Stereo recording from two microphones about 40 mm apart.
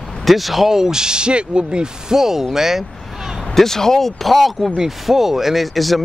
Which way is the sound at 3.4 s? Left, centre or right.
Centre.